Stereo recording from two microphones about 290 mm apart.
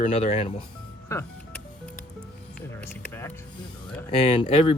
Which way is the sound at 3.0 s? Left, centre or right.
Centre.